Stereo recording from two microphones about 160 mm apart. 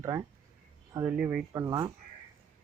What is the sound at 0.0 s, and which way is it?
Speech, 20° right (ahead or behind).